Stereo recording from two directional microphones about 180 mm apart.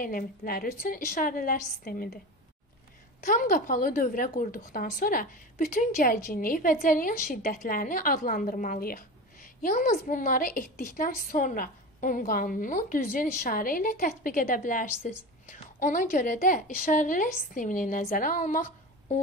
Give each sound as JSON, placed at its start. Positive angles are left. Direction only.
{"t": 0.0, "sound": "a woman's voice", "side_deg": 55}
{"t": 3.3, "sound": "a woman's voice", "side_deg": 50}